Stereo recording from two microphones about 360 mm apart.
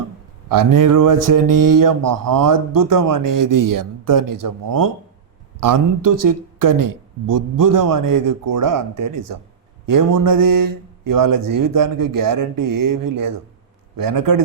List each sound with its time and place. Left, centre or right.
0.4 s a man's voice: right